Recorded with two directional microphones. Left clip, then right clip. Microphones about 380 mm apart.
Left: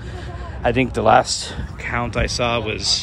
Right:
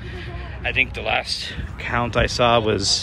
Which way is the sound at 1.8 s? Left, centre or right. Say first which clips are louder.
Right 2 dB; centre.